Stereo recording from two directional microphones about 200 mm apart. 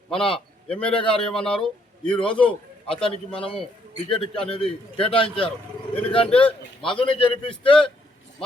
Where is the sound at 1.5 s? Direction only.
5° left (ahead or behind).